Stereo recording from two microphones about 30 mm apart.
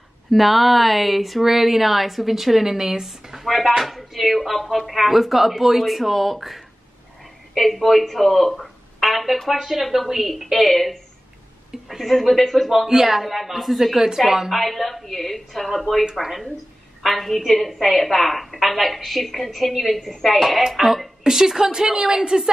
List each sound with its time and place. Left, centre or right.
0.3 s a woman's voice: centre
12.0 s a woman's voice: centre
12.8 s a woman's voice: centre
14.5 s a woman's voice: centre
21.2 s a woman's voice: centre